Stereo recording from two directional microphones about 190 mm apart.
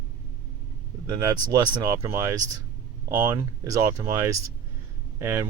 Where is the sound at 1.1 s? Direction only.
20° right (ahead or behind).